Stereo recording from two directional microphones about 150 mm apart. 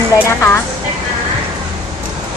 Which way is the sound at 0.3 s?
15° left (ahead or behind).